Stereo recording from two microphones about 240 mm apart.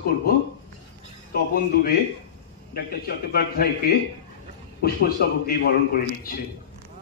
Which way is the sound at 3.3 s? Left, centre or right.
Left.